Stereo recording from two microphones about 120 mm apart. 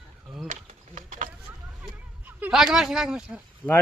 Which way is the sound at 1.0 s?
90° right.